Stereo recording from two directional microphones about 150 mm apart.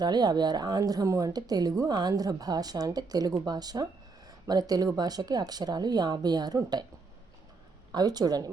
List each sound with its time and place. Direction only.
0.0 s speech: 30° right (ahead or behind)
7.9 s speech: 25° right (ahead or behind)